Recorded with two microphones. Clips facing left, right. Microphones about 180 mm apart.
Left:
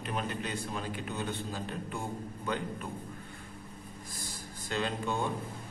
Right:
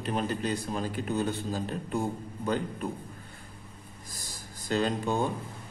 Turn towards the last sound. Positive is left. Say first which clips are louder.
# right 5 dB
turn(degrees=-40)  # may be behind; listen again after turning